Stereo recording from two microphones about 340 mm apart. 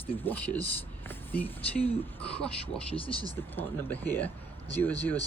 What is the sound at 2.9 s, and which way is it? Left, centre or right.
Speech, centre.